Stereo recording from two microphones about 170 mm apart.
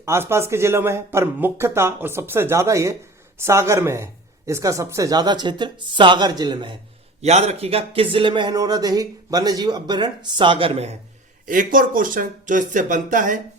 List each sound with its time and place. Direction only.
0.0 s speech: 15° right (ahead or behind)
7.2 s speech: 40° right (ahead or behind)
11.4 s speech: 55° right (ahead or behind)